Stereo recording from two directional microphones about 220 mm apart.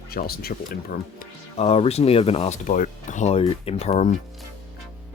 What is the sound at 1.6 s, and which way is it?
Speech, 30° left (ahead or behind).